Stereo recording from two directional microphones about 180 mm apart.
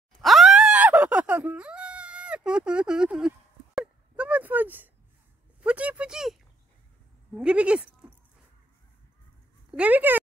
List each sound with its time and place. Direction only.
0.2 s groan: centre (ahead or behind)
5.6 s a sound: 5° right (ahead or behind)
7.3 s speech: 5° right (ahead or behind)
9.7 s speech: 10° right (ahead or behind)